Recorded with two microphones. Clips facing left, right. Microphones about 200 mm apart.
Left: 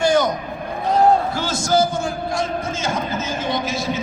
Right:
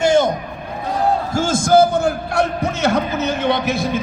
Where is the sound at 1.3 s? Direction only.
50° right (ahead or behind).